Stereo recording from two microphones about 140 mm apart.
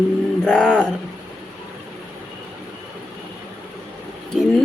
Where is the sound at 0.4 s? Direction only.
5° left (ahead or behind).